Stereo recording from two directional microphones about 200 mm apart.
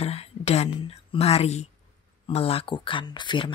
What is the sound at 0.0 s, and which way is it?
Whispering, 30° left (ahead or behind).